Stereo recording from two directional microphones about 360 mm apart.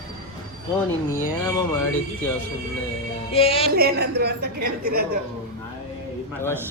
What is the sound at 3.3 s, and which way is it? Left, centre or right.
Speech, centre.